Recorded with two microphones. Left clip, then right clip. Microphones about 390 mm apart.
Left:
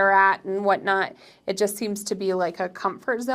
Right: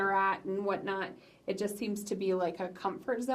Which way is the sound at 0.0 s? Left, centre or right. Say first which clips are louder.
Left 11 dB; left.